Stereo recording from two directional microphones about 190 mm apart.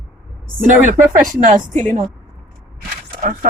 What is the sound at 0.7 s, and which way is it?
Speech, 45° right (ahead or behind).